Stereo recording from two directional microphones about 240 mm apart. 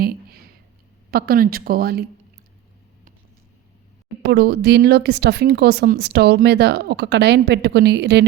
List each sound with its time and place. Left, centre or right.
0.0 s a sound: right
1.1 s speech: right
4.2 s speech: right